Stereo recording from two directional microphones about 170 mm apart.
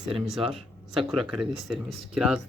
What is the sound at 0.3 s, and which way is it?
Speech, centre (ahead or behind).